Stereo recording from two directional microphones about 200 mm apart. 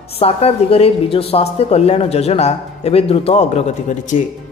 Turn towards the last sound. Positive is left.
turn(degrees=35)  # may be behind; listen again after turning